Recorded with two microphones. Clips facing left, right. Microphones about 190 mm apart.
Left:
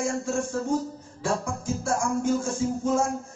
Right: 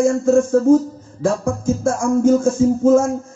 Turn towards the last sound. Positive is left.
turn(degrees=-45)  # may be behind; listen again after turning